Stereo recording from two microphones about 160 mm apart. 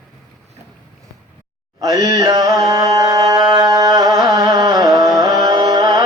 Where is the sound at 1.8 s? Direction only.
20° right (ahead or behind).